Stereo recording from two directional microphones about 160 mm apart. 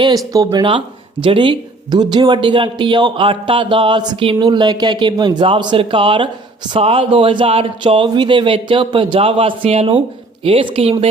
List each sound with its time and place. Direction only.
0.0 s speech: 25° right (ahead or behind)